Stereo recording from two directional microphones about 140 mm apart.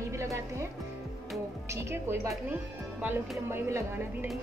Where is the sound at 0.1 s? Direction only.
20° right (ahead or behind).